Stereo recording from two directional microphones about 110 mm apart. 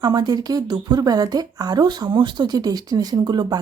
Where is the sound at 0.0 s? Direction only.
40° right (ahead or behind).